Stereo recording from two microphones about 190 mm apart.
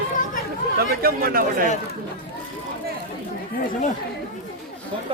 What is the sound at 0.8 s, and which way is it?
Speech, 50° right (ahead or behind).